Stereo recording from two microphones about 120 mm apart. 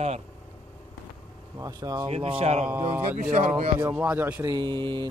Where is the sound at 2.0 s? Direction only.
55° right (ahead or behind).